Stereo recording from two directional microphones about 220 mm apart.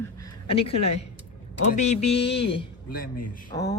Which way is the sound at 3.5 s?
15° left (ahead or behind).